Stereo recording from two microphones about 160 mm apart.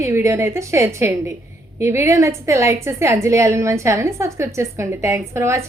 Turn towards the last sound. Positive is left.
turn(degrees=-15)  # may be behind; listen again after turning